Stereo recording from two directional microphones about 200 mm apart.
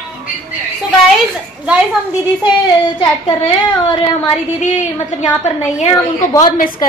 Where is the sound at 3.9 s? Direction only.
30° left (ahead or behind).